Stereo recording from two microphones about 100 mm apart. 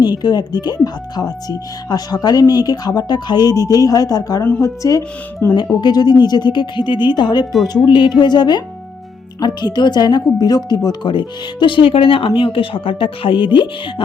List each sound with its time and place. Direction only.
0.0 s speech: 45° left (ahead or behind); by 5.5 s 30° left (ahead or behind)
5.8 s speech: 45° left (ahead or behind)
10.8 s speech: 50° left (ahead or behind)